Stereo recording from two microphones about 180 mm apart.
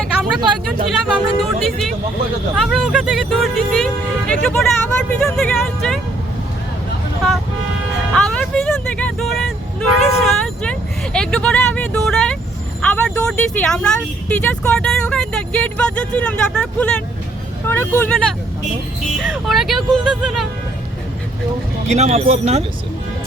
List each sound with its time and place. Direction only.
0.0 s a sound: centre (ahead or behind)
0.9 s speech: centre (ahead or behind)
1.6 s vehicle: centre (ahead or behind)
2.6 s music: centre (ahead or behind)
5.2 s speech: 5° left (ahead or behind)
8.1 s music: 5° left (ahead or behind)
10.2 s vehicle: 5° left (ahead or behind)
12.8 s speech: 5° left (ahead or behind)
19.2 s speech: centre (ahead or behind)
21.8 s speech: 35° right (ahead or behind)